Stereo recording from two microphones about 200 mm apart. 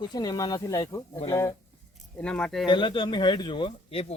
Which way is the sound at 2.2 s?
5° left (ahead or behind).